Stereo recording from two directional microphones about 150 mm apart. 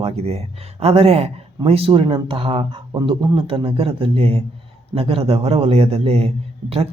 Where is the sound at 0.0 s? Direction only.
40° right (ahead or behind).